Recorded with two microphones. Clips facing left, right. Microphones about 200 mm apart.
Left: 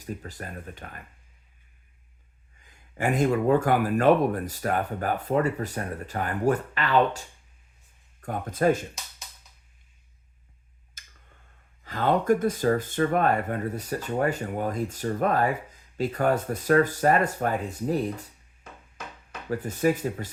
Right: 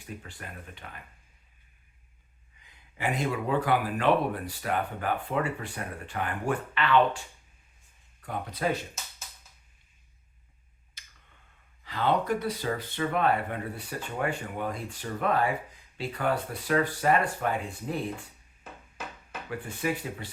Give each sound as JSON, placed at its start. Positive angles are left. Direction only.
{"t": 0.0, "sound": "speech", "side_deg": 40}
{"t": 2.6, "sound": "speech", "side_deg": 45}
{"t": 11.0, "sound": "tick-tock", "side_deg": 45}
{"t": 11.8, "sound": "speech", "side_deg": 45}
{"t": 19.5, "sound": "speech", "side_deg": 40}